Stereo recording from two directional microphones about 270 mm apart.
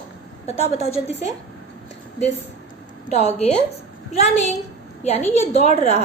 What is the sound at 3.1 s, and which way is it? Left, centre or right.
Speech, left.